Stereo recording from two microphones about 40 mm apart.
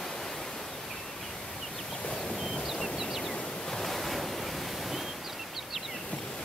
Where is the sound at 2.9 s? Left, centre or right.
Centre.